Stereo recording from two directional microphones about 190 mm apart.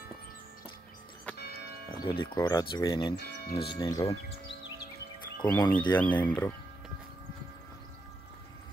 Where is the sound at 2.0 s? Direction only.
25° left (ahead or behind).